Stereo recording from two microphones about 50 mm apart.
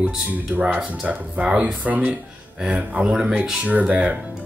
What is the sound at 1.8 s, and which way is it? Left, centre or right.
Speech, right.